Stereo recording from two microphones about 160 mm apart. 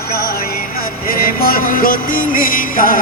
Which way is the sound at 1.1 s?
60° left (ahead or behind).